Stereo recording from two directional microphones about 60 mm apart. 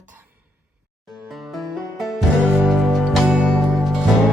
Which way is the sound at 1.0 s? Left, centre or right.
Centre.